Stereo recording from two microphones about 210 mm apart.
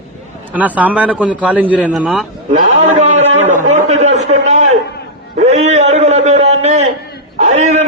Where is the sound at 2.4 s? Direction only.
35° right (ahead or behind).